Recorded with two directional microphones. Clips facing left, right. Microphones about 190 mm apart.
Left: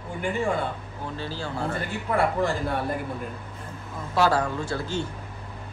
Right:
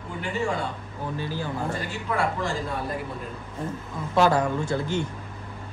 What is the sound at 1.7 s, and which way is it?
A man's voice, 55° left (ahead or behind).